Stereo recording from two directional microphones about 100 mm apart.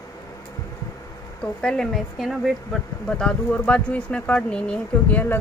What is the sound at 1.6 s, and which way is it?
Speech, 10° left (ahead or behind).